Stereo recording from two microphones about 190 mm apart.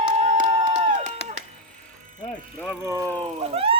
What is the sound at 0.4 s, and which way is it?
Crowd, 35° right (ahead or behind).